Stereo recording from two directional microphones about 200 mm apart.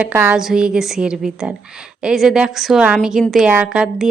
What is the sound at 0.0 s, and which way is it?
A woman's voice, 10° right (ahead or behind).